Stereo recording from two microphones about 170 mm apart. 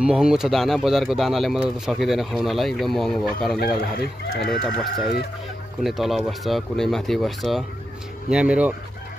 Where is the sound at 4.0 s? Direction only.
75° left (ahead or behind).